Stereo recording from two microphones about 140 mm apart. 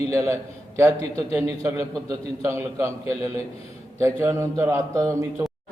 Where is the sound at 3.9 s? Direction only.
20° right (ahead or behind).